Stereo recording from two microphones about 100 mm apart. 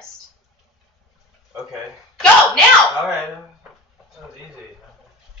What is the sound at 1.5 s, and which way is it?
Speech, 5° right (ahead or behind).